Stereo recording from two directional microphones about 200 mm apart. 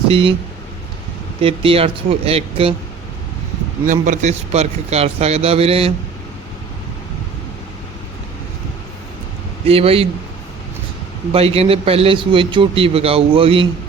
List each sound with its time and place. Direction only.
0.1 s a man's voice: 25° right (ahead or behind)
1.4 s a man's voice: 30° right (ahead or behind)
3.8 s a man's voice: 40° right (ahead or behind)
9.6 s a man's voice: 30° right (ahead or behind)
11.3 s a man's voice: 30° right (ahead or behind)